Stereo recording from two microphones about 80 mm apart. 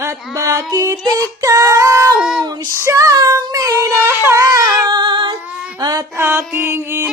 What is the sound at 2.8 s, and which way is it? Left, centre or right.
Child singing, right.